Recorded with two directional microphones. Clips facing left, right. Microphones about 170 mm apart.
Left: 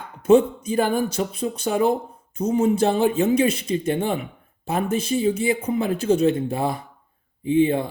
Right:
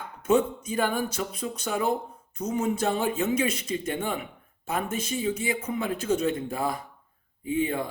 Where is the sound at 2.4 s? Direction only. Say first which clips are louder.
Left 7 dB; 30° left (ahead or behind).